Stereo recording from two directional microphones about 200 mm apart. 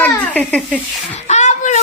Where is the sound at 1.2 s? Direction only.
35° left (ahead or behind).